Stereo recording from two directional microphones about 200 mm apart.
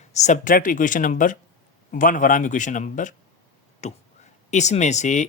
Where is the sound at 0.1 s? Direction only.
35° left (ahead or behind).